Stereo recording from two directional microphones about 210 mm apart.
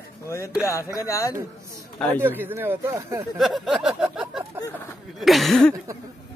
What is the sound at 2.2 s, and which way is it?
Speech, 10° right (ahead or behind).